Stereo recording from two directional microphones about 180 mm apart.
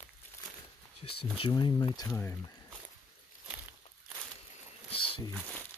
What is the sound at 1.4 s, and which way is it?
Speech, 25° left (ahead or behind).